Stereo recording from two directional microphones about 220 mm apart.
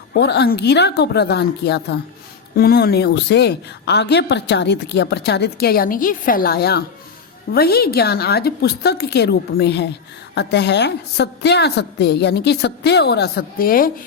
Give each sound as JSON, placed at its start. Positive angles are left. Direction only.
{"t": 0.1, "sound": "a woman's voice", "side_deg": 50}